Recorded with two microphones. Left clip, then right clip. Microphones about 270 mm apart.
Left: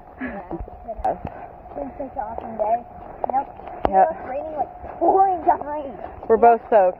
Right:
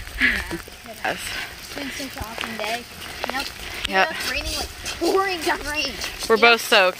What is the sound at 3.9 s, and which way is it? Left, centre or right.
Speech, centre.